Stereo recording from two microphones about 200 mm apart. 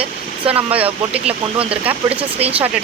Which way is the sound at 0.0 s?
30° right (ahead or behind).